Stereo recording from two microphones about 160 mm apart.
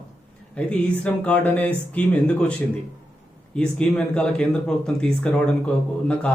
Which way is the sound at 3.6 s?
5° left (ahead or behind).